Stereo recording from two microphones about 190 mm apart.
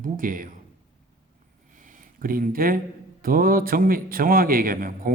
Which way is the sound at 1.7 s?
45° right (ahead or behind).